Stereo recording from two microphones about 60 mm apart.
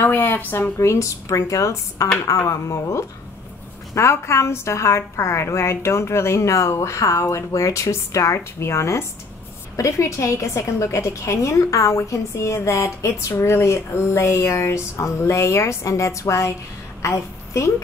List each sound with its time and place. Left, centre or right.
0.0 s a sound: left
0.4 s speech: left
0.7 s a woman's voice: left